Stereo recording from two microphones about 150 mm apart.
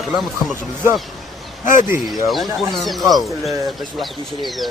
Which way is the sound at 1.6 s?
60° left (ahead or behind).